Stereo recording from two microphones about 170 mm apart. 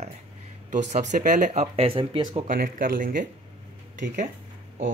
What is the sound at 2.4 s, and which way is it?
Speech, 55° right (ahead or behind).